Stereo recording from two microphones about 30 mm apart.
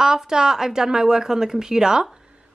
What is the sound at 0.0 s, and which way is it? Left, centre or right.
A woman's voice, centre.